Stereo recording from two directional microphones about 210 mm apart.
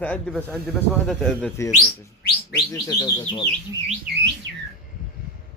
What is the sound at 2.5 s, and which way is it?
Speech, 20° left (ahead or behind).